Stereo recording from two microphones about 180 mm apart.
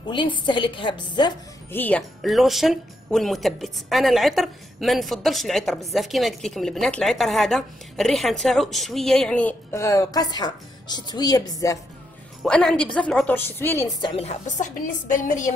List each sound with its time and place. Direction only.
0.0 s a woman's voice: 25° left (ahead or behind)
1.7 s speech: 10° left (ahead or behind)
12.4 s a woman's voice: 5° left (ahead or behind)
14.1 s a woman's voice: 40° left (ahead or behind)